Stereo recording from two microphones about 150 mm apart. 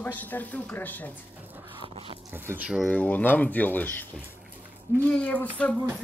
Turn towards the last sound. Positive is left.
turn(degrees=10)  # may be behind; listen again after turning